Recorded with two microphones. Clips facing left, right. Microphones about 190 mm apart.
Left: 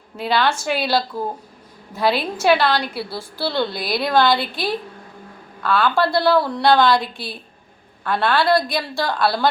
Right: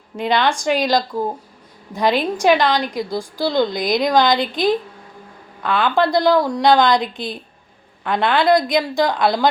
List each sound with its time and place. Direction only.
0.2 s a woman's voice: 5° left (ahead or behind)
0.5 s a woman's voice: 15° right (ahead or behind)